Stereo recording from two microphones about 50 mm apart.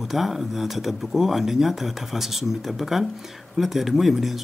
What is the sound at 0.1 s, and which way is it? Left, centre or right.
Speech, centre.